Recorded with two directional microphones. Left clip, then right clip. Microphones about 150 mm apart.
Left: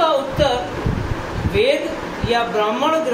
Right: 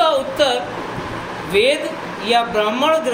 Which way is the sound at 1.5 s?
90° right.